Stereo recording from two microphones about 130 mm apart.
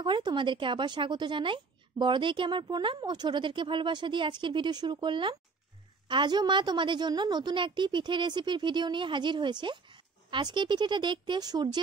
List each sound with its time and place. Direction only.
0.0 s a woman's voice: 35° right (ahead or behind)